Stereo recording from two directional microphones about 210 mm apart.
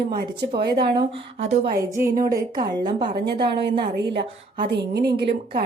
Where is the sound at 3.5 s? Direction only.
50° right (ahead or behind).